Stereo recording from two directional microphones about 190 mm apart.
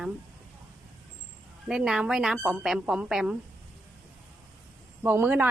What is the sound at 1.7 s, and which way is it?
A woman's voice, 5° right (ahead or behind).